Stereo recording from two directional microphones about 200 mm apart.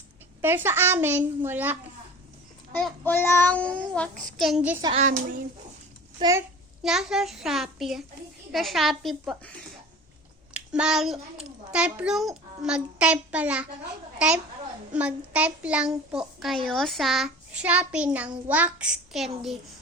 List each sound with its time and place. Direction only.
0.4 s a child's voice: 10° right (ahead or behind)
2.7 s child singing: 10° left (ahead or behind)
4.9 s speech: 40° right (ahead or behind)
6.1 s a child's voice: 20° right (ahead or behind)
6.8 s a child's voice: centre (ahead or behind)